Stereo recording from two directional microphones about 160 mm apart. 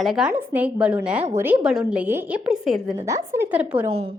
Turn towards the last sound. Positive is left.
turn(degrees=-10)  # may be behind; listen again after turning